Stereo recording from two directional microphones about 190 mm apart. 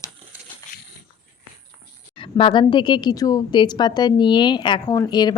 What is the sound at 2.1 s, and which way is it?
A woman's voice, 25° left (ahead or behind).